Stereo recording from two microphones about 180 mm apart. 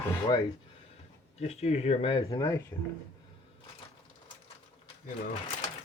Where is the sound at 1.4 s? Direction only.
35° left (ahead or behind); by 2.7 s 15° left (ahead or behind).